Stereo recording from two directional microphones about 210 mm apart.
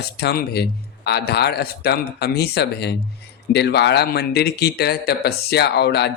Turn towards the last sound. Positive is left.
turn(degrees=50)  # may be behind; listen again after turning